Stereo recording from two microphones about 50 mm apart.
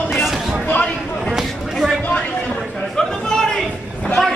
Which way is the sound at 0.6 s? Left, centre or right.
Left.